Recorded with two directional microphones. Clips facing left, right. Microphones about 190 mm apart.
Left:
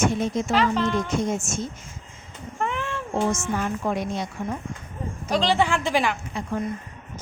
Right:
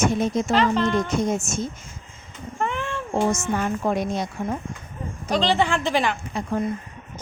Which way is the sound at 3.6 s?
40° right (ahead or behind).